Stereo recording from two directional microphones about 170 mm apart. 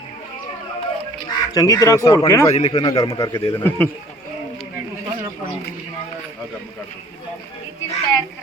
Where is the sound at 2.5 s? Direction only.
35° left (ahead or behind).